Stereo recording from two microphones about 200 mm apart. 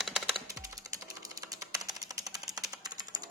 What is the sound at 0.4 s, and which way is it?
Music, 15° right (ahead or behind).